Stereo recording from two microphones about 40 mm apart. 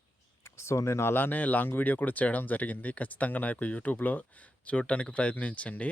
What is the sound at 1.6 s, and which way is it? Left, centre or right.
Speech, left.